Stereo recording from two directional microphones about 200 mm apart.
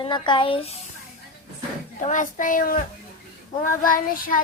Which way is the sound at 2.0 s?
40° left (ahead or behind).